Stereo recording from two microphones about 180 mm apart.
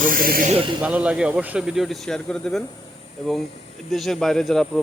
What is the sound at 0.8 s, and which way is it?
Speech, 5° right (ahead or behind).